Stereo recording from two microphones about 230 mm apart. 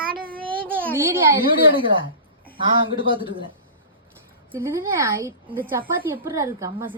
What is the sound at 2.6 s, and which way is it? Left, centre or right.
Speech, right.